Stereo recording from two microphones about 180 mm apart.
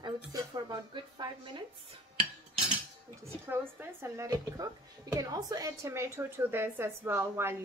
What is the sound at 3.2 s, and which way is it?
A woman's voice, 15° right (ahead or behind).